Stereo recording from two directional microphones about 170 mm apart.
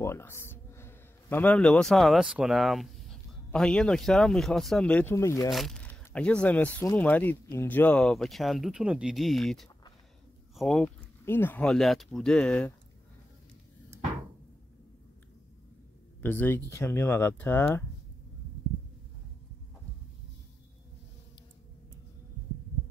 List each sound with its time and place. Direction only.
0.0 s a man's voice: 15° left (ahead or behind)
5.5 s speech: centre (ahead or behind)
11.2 s speech: 10° left (ahead or behind)
16.2 s speech: 10° left (ahead or behind)